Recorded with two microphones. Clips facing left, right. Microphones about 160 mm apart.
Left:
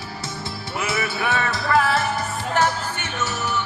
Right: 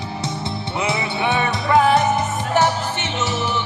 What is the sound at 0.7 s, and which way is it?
Music, 20° right (ahead or behind).